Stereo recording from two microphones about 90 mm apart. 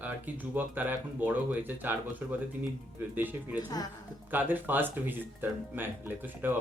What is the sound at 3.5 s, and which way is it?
Speech, 45° left (ahead or behind).